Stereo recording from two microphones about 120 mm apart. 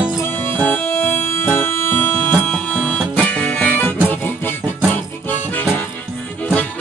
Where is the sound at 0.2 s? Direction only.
20° left (ahead or behind).